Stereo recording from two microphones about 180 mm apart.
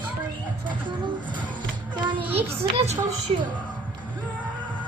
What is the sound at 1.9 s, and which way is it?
Child singing, 25° right (ahead or behind).